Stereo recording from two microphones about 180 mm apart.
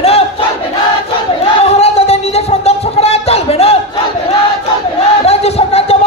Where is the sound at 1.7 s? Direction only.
35° left (ahead or behind).